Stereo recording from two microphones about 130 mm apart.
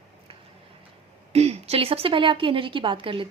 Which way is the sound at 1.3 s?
50° right (ahead or behind).